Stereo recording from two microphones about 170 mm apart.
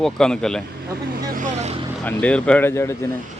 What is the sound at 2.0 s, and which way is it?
Speech, 5° left (ahead or behind).